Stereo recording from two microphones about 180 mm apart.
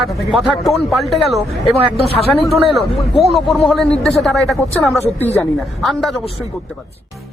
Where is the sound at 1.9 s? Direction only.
35° left (ahead or behind).